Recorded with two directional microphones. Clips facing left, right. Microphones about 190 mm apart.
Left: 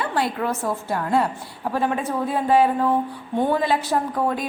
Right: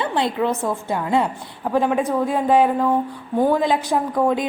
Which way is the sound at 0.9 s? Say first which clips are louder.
Right 1 dB; 20° right (ahead or behind).